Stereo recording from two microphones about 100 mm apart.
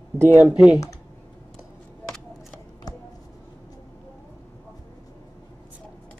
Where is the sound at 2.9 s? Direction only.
40° left (ahead or behind).